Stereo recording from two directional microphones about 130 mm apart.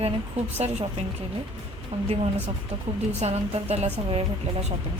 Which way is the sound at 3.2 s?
55° right (ahead or behind).